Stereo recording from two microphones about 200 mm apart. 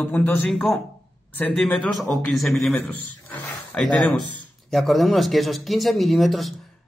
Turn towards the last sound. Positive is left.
turn(degrees=0)  # may be behind; listen again after turning